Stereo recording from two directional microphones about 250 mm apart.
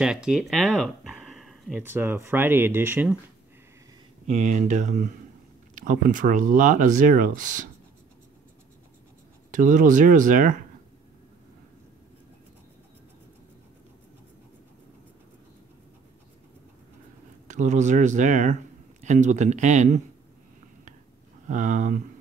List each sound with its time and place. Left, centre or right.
0.0 s speech: centre
4.3 s speech: right
9.5 s speech: right
17.5 s speech: right
21.5 s speech: right